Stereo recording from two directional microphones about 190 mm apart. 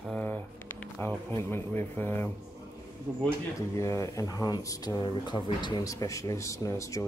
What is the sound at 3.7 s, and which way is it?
Speech, 15° left (ahead or behind).